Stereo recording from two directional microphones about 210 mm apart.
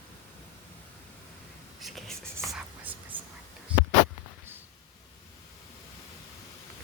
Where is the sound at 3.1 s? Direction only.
25° right (ahead or behind).